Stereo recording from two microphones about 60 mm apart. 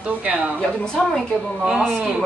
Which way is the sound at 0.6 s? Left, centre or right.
Centre.